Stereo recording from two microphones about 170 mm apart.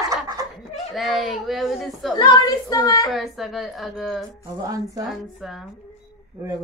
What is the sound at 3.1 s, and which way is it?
A woman's voice, centre (ahead or behind).